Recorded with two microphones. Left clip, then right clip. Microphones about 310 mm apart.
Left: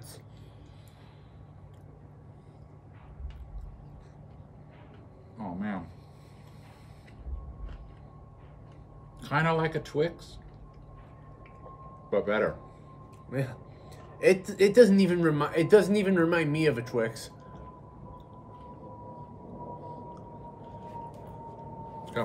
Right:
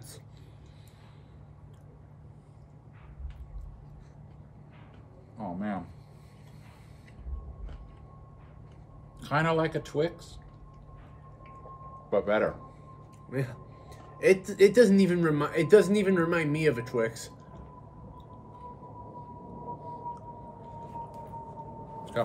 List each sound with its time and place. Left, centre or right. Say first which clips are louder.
5.4 s speech: right 1 dB; centre
9.2 s speech: even; centre
12.1 s speech: right 1 dB; centre
13.3 s speech: even; centre
22.2 s vehicle: right 3 dB; centre